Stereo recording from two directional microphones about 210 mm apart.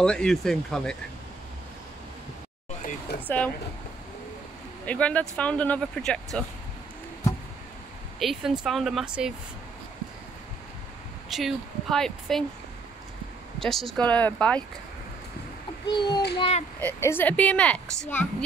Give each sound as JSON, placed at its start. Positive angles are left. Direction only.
{"t": 0.0, "sound": "speech", "side_deg": 5}
{"t": 2.8, "sound": "a sound", "side_deg": 40}
{"t": 3.3, "sound": "speech", "side_deg": 5}
{"t": 4.8, "sound": "speech", "side_deg": 5}
{"t": 8.2, "sound": "speech", "side_deg": 0}
{"t": 11.2, "sound": "speech", "side_deg": 0}
{"t": 13.6, "sound": "speech", "side_deg": 0}
{"t": 15.9, "sound": "a child's voice", "side_deg": 20}
{"t": 16.8, "sound": "speech", "side_deg": 10}